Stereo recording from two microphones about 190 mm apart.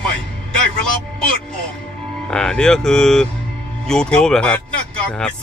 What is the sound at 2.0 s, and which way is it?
Speech, 5° left (ahead or behind).